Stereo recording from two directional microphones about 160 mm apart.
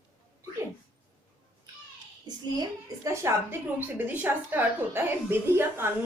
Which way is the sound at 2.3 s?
25° right (ahead or behind).